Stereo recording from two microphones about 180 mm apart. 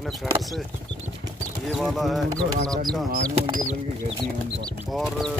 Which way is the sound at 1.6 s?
Centre (ahead or behind).